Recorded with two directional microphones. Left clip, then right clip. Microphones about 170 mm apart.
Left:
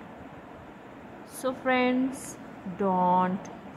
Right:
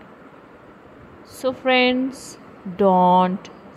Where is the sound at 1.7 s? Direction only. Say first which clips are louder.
Right 8 dB; 50° right (ahead or behind); by 3.5 s 70° right (ahead or behind).